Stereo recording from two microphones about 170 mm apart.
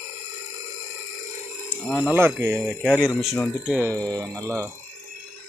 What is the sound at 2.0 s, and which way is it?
Speech, 10° right (ahead or behind).